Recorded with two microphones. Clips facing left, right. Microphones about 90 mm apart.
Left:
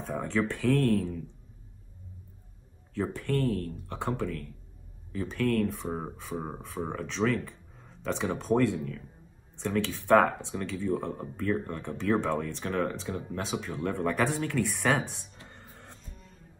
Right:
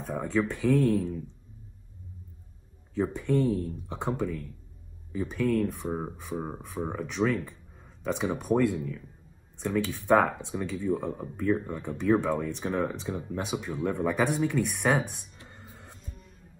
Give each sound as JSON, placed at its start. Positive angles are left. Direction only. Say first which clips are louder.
{"t": 0.0, "sound": "speech", "louder": "right 1 dB", "side_deg": 0}
{"t": 2.9, "sound": "speech", "louder": "right 3 dB", "side_deg": -15}
{"t": 15.4, "sound": "music", "louder": "right 1 dB", "side_deg": -15}